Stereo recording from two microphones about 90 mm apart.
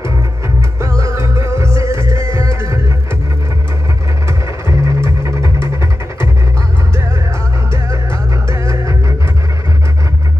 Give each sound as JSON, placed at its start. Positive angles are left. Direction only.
{"t": 0.7, "sound": "music", "side_deg": -35}
{"t": 4.6, "sound": "music", "side_deg": -35}
{"t": 8.5, "sound": "music", "side_deg": -30}